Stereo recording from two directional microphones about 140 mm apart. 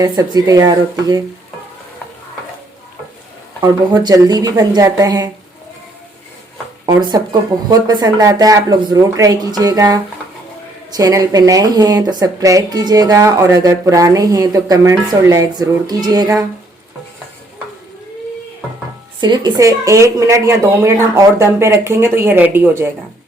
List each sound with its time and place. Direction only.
0.0 s speech: 25° right (ahead or behind)
3.6 s speech: 30° right (ahead or behind)
6.8 s speech: 30° right (ahead or behind)
19.2 s speech: 30° right (ahead or behind); by 22.9 s 15° right (ahead or behind)